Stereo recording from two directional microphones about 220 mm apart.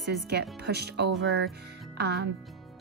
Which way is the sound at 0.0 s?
50° right (ahead or behind).